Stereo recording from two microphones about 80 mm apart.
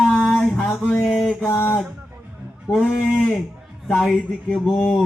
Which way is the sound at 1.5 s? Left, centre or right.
Left.